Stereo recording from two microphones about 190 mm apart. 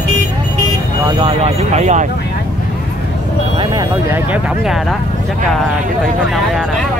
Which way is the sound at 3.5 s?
25° right (ahead or behind).